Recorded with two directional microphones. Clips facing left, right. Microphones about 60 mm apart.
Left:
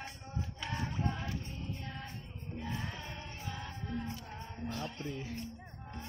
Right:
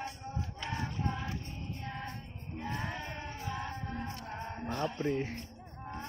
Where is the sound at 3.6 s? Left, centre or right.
Right.